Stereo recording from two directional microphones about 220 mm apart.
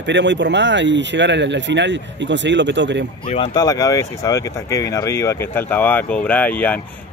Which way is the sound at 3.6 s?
15° left (ahead or behind).